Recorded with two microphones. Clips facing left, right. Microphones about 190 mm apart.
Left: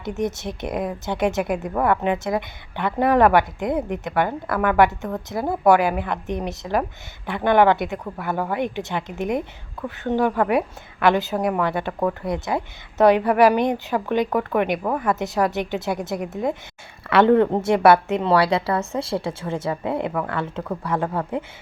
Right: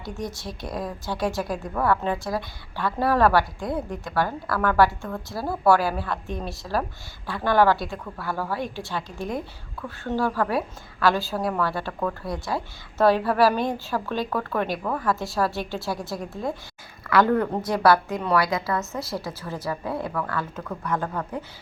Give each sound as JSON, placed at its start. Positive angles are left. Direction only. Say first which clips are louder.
{"t": 0.0, "sound": "speech", "louder": "left 7 dB", "side_deg": 20}